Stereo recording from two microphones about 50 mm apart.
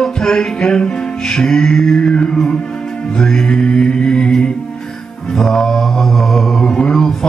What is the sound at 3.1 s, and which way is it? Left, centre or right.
Music, centre.